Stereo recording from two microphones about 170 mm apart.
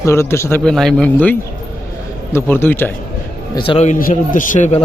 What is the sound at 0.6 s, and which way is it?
A man's voice, 5° left (ahead or behind).